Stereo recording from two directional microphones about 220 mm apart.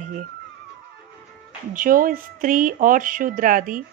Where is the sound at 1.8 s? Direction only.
40° right (ahead or behind).